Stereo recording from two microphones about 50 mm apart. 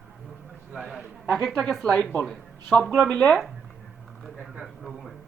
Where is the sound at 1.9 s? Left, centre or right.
Left.